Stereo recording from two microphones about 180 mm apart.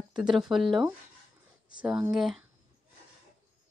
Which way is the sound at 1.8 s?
5° right (ahead or behind).